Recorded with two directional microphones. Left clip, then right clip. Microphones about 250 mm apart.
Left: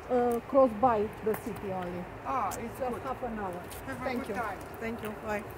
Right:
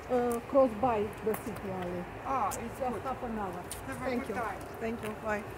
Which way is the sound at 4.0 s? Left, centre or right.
Left.